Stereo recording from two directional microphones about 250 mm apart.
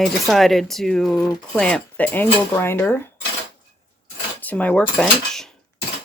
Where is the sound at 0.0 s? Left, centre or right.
Centre.